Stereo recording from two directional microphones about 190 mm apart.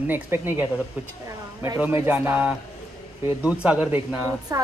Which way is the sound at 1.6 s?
10° right (ahead or behind).